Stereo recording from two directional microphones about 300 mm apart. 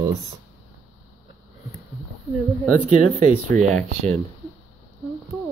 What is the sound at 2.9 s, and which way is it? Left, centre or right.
Speech, right.